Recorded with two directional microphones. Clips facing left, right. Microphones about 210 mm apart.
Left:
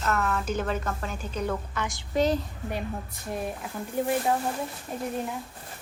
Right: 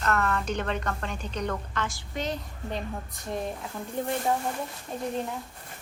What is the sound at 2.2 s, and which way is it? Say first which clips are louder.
Speech: left 8 dB; 35° left (ahead or behind).